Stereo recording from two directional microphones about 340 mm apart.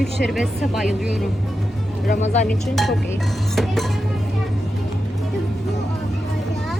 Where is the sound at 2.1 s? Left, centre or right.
Left.